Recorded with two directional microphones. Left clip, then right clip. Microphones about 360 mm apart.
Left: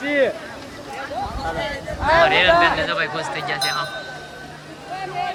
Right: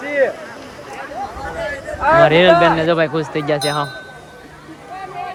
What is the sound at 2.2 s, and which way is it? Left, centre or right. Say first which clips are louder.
Speech: right 4 dB; centre.